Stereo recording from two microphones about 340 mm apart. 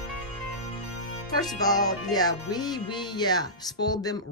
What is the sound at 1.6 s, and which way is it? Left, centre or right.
Speech, centre.